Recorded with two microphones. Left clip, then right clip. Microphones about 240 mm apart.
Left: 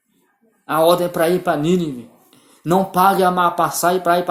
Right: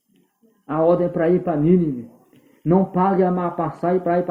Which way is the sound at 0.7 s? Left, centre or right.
Left.